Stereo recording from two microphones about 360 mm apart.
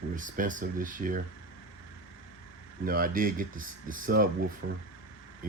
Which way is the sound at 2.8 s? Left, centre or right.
Right.